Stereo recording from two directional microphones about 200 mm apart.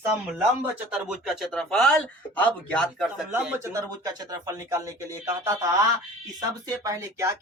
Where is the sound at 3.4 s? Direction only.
10° right (ahead or behind).